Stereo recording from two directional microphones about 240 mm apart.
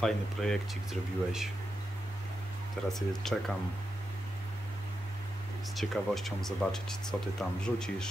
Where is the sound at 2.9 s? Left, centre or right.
Centre.